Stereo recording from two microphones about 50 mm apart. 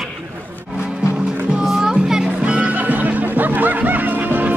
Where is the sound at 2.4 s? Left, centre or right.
Right.